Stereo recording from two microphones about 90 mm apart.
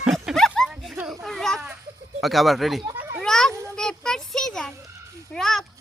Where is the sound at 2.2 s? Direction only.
Centre (ahead or behind).